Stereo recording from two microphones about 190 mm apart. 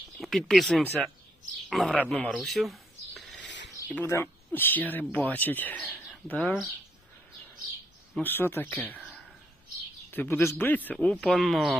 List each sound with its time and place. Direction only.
0.2 s a man's voice: centre (ahead or behind)
3.4 s a sound: 70° left (ahead or behind)
3.8 s speech: 10° left (ahead or behind)
8.1 s speech: 10° left (ahead or behind)
10.1 s a man's voice: 10° left (ahead or behind)